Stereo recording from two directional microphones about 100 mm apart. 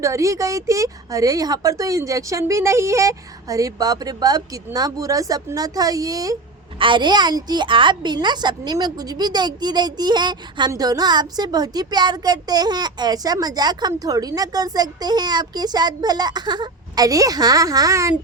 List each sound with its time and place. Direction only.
0.0 s a woman's voice: 30° right (ahead or behind)
6.7 s a woman's voice: 55° right (ahead or behind); by 18.1 s 35° right (ahead or behind)